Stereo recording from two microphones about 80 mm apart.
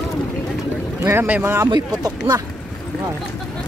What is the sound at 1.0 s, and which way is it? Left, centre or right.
Speech, right.